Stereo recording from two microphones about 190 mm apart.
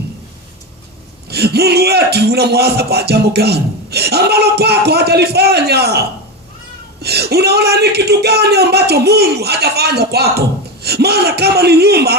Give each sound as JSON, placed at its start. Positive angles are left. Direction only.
{"t": 1.3, "sound": "a man's voice", "side_deg": -55}